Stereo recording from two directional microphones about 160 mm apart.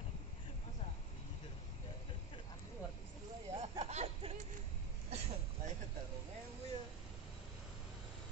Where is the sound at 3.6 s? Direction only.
40° right (ahead or behind).